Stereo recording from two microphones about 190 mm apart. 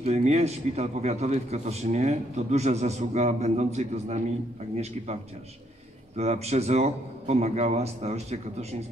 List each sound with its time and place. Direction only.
0.0 s a man's voice: 35° right (ahead or behind)